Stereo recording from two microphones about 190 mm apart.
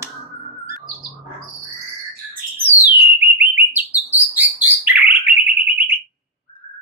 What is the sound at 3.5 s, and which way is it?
Bird, 10° right (ahead or behind).